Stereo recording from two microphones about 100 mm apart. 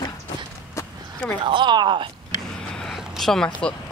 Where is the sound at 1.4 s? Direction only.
50° right (ahead or behind).